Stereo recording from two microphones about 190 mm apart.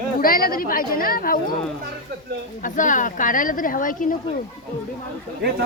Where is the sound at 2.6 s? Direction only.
45° left (ahead or behind).